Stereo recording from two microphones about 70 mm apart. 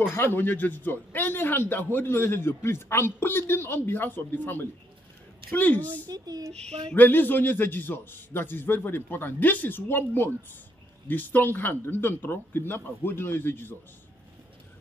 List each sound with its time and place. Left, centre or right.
0.1 s a man's voice: left
6.0 s speech: right
7.0 s a man's voice: left